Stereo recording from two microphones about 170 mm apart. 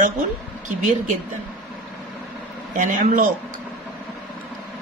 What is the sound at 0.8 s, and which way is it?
Speech, 45° right (ahead or behind).